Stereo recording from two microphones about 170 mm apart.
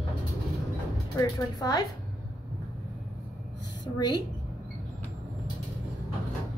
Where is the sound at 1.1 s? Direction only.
20° left (ahead or behind).